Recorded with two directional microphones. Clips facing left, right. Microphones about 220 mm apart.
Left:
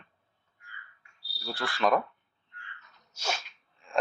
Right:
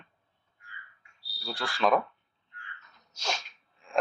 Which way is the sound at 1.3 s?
5° left (ahead or behind).